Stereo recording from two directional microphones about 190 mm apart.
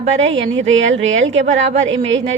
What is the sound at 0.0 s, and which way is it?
A woman's voice, 35° right (ahead or behind).